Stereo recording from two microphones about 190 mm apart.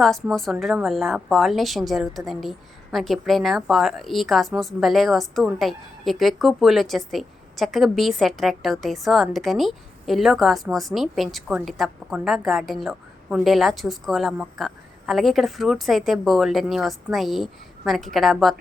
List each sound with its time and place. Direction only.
0.0 s a woman's voice: centre (ahead or behind)